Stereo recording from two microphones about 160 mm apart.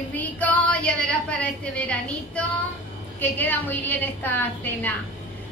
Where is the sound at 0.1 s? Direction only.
10° left (ahead or behind).